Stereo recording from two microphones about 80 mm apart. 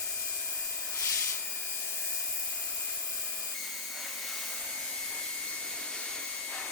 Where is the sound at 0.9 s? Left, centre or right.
Left.